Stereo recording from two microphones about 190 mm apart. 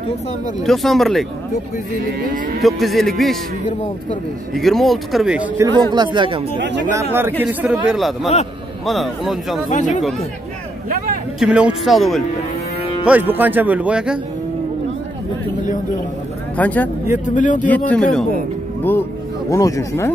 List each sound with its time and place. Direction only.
0.7 s a man's voice: centre (ahead or behind)
2.6 s a man's voice: centre (ahead or behind)
4.6 s a man's voice: centre (ahead or behind)
5.6 s speech: 25° right (ahead or behind)
6.9 s a man's voice: 15° right (ahead or behind)
9.7 s speech: 40° left (ahead or behind)
11.3 s a man's voice: 5° right (ahead or behind)
16.5 s speech: 10° left (ahead or behind)
17.1 s speech: 40° left (ahead or behind)
17.6 s speech: 10° left (ahead or behind)
19.5 s speech: 15° left (ahead or behind)